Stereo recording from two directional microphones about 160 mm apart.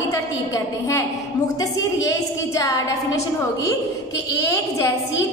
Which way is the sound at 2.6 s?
20° left (ahead or behind).